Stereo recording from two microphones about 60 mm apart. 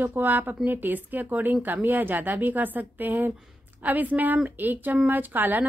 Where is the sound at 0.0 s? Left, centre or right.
Right.